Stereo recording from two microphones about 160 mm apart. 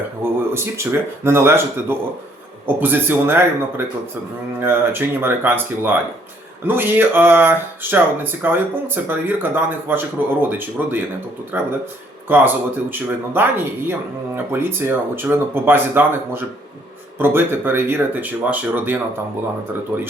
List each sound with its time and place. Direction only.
0.2 s speech: 15° right (ahead or behind)